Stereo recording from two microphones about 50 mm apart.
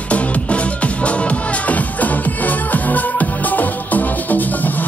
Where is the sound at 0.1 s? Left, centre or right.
Left.